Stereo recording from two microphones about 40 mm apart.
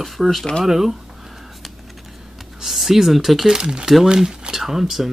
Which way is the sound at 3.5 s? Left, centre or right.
Right.